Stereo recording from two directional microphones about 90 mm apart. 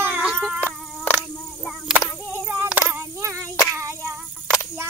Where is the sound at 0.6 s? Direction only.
20° left (ahead or behind).